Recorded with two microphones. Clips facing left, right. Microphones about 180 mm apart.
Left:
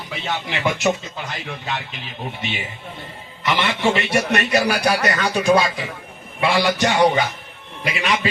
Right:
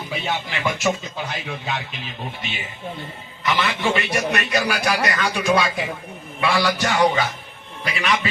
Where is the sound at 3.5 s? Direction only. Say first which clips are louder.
Left 2 dB; 25° left (ahead or behind).